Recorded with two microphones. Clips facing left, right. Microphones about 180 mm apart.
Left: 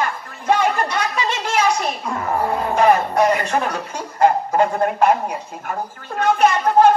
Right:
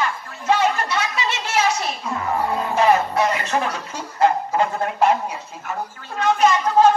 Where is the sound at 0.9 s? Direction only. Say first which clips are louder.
Left 2 dB; 55° left (ahead or behind).